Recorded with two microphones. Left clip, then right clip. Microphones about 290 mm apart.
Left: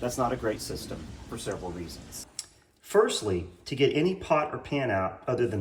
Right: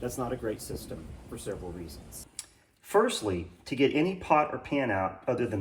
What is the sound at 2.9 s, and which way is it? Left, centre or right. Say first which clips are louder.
Speech: left 2 dB; centre.